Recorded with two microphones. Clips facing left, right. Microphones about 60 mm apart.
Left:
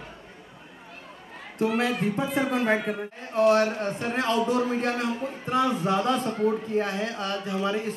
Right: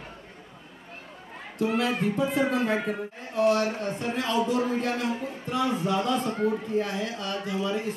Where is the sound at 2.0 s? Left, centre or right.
Left.